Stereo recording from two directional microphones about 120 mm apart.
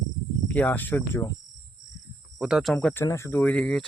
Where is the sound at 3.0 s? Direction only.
25° left (ahead or behind); by 3.9 s 5° left (ahead or behind).